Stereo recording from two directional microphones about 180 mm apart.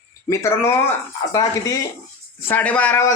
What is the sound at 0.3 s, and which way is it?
Speech, 15° left (ahead or behind).